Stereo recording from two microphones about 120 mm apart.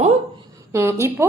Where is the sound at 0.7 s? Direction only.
20° right (ahead or behind).